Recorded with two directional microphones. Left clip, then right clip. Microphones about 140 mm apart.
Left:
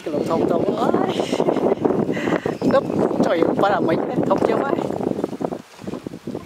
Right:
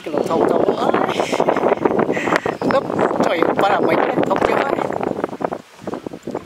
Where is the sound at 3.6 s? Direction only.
10° right (ahead or behind).